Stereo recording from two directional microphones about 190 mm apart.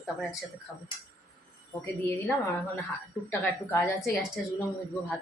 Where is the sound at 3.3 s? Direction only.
10° left (ahead or behind).